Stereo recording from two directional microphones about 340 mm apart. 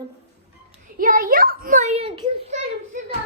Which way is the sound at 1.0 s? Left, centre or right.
Right.